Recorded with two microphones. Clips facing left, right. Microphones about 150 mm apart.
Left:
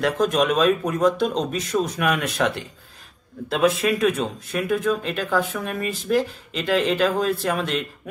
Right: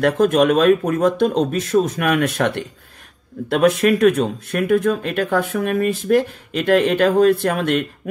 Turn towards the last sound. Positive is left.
turn(degrees=-55)  # may be behind; listen again after turning